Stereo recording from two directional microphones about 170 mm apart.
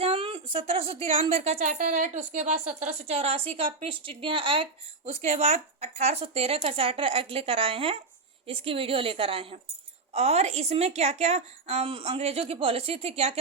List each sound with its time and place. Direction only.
0.0 s a woman's voice: 35° right (ahead or behind)